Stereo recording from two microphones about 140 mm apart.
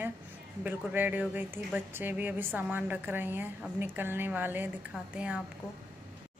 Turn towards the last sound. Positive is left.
turn(degrees=-5)  # may be behind; listen again after turning